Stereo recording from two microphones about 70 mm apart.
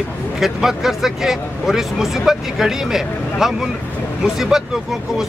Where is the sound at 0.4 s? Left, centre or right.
Centre.